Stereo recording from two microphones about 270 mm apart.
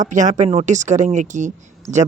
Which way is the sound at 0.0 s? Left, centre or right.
Right.